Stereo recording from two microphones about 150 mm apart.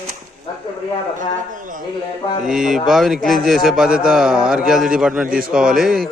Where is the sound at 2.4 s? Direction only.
5° right (ahead or behind).